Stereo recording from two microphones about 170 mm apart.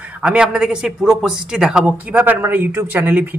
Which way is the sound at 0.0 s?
5° right (ahead or behind).